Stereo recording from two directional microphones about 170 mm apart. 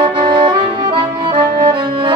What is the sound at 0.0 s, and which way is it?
Accordion, 25° right (ahead or behind).